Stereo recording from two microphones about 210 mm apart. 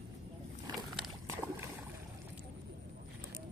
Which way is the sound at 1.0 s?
10° right (ahead or behind).